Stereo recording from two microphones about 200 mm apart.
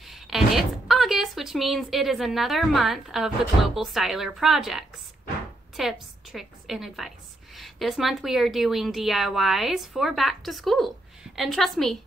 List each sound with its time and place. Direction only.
0.1 s a woman's voice: centre (ahead or behind)